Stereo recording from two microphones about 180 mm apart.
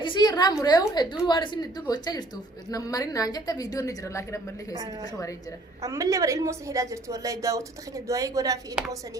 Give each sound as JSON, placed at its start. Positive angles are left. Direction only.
{"t": 0.0, "sound": "a sound", "side_deg": 25}
{"t": 0.7, "sound": "a woman's voice", "side_deg": 25}
{"t": 5.8, "sound": "a woman's voice", "side_deg": -15}